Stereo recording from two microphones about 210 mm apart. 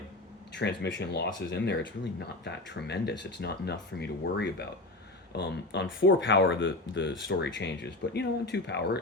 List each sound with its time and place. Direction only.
0.5 s speech: 55° left (ahead or behind)